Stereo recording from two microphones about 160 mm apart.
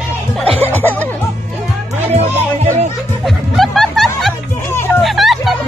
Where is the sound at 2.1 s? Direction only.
40° right (ahead or behind).